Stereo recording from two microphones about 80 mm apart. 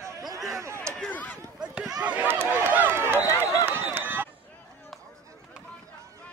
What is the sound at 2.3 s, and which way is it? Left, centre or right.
Run, right.